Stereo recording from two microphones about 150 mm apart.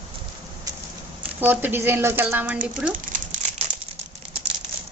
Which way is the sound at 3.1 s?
60° right (ahead or behind).